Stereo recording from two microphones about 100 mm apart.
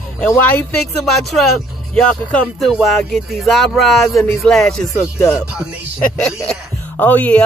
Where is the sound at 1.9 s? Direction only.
10° left (ahead or behind).